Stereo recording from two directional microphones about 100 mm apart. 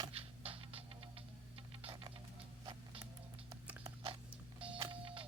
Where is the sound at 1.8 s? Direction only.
60° right (ahead or behind).